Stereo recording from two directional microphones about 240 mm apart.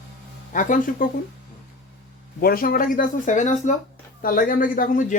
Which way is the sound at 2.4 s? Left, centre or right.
Left.